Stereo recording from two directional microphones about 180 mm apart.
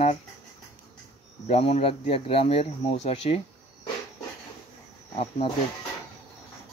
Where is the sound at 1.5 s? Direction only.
35° left (ahead or behind).